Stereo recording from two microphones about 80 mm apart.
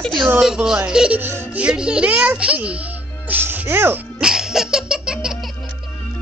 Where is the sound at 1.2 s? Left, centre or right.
Right.